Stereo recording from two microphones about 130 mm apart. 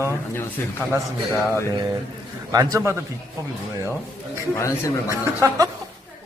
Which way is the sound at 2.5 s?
30° right (ahead or behind).